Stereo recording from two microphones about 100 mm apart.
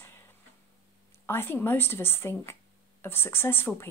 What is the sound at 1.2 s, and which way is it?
Speech, 25° left (ahead or behind).